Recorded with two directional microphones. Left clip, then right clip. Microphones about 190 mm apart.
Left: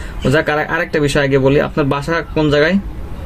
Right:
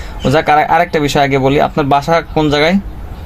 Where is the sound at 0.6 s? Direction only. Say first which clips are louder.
Right 5 dB; 20° right (ahead or behind).